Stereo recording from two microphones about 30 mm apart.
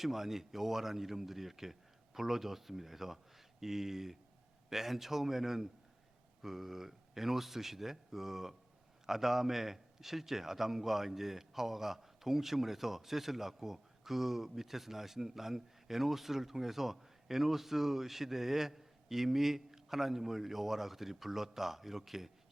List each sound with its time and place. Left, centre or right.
0.0 s a man's voice: centre